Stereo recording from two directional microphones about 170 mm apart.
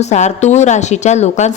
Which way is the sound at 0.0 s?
45° left (ahead or behind).